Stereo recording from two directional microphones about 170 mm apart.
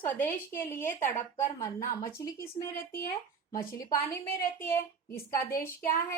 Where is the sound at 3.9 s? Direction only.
60° left (ahead or behind).